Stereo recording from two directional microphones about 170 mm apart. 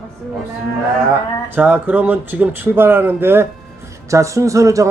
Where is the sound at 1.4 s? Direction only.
10° right (ahead or behind).